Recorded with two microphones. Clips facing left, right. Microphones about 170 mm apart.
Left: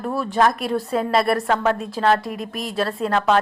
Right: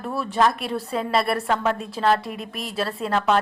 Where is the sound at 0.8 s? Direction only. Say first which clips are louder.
Left 4 dB; 45° left (ahead or behind).